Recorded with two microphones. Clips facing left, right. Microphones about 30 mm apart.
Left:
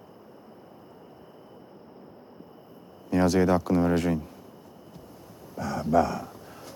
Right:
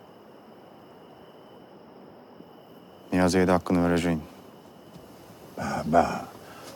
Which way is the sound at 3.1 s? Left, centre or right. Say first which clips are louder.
Even; centre.